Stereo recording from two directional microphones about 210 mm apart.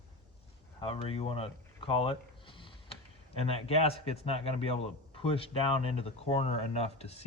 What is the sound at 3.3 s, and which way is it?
A man's voice, 30° left (ahead or behind).